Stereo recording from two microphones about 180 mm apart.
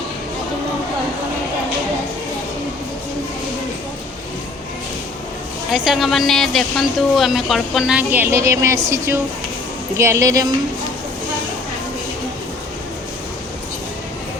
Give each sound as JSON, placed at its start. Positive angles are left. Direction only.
{"t": 5.7, "sound": "a woman's voice", "side_deg": -5}